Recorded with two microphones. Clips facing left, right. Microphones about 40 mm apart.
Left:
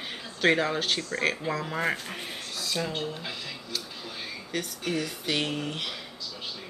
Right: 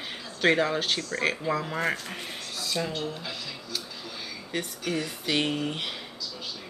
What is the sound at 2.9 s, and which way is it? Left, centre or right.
Speech, centre.